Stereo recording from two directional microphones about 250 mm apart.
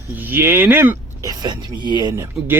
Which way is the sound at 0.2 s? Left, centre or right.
Centre.